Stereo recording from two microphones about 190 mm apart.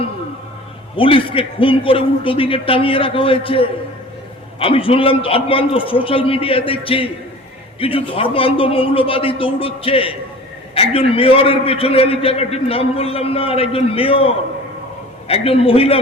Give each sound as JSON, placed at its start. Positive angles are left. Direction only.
{"t": 0.9, "sound": "a man's voice", "side_deg": 30}